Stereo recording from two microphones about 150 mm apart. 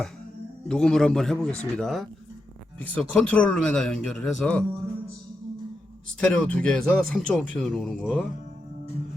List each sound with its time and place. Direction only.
0.7 s a man's voice: 5° left (ahead or behind)
6.1 s a man's voice: 5° left (ahead or behind)